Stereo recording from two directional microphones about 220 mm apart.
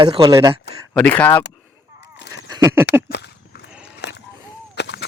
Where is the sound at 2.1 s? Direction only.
55° left (ahead or behind).